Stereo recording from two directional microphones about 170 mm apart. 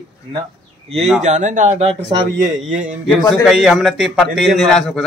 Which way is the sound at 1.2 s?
45° right (ahead or behind).